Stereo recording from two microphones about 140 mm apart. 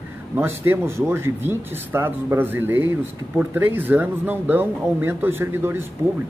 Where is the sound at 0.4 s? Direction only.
15° right (ahead or behind).